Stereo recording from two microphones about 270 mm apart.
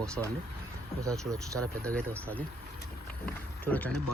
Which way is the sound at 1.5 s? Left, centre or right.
Centre.